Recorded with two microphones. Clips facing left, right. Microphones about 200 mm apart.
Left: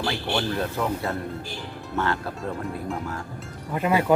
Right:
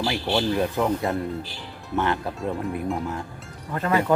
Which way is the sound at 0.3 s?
15° right (ahead or behind).